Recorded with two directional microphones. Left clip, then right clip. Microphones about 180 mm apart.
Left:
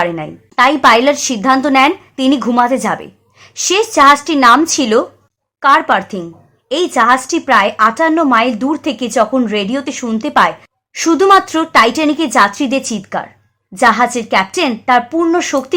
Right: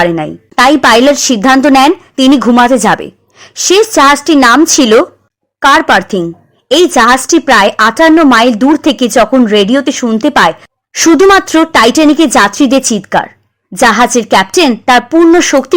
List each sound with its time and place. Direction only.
0.0 s a woman's voice: 40° right (ahead or behind)